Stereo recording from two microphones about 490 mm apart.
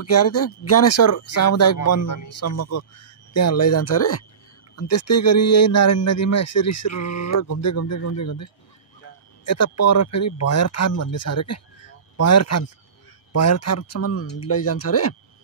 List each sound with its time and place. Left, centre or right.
0.0 s a man's voice: left
9.5 s a man's voice: left